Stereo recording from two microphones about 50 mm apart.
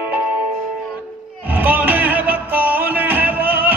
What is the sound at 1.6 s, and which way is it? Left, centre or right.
Music, right.